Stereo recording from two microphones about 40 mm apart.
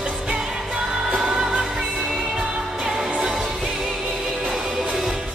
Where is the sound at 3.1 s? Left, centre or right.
Right.